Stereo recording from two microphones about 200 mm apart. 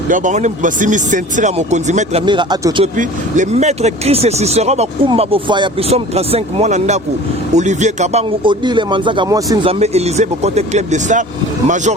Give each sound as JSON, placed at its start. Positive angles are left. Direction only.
{"t": 0.1, "sound": "speech", "side_deg": -40}
{"t": 2.2, "sound": "a man's voice", "side_deg": -25}
{"t": 2.8, "sound": "a man's voice", "side_deg": -40}
{"t": 9.7, "sound": "speech", "side_deg": -30}